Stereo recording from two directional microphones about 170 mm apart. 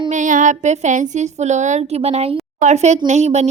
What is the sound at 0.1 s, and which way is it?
A woman's voice, 50° right (ahead or behind).